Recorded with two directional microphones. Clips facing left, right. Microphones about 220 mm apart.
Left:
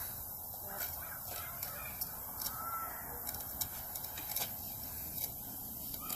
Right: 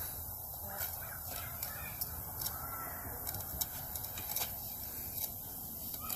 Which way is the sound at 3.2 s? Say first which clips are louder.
Right 2 dB; centre (ahead or behind).